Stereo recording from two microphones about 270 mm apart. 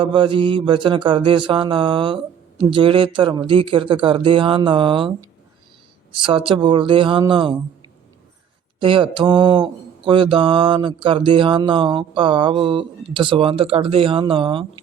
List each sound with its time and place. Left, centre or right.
0.0 s mantra: centre
6.1 s mantra: centre
8.8 s mantra: centre